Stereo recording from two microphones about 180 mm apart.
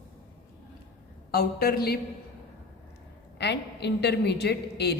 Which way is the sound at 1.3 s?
60° left (ahead or behind).